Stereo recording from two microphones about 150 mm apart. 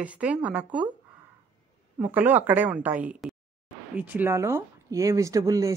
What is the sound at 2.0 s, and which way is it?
A woman's voice, 10° right (ahead or behind).